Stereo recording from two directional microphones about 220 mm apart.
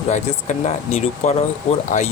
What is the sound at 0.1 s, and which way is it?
Speech, 30° left (ahead or behind).